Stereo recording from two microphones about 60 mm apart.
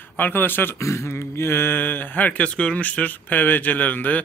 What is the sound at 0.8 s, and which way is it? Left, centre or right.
Speech, left.